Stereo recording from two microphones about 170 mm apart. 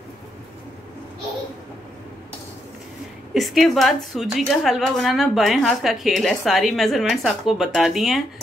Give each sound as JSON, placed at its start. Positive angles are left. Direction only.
{"t": 3.3, "sound": "a woman's voice", "side_deg": 0}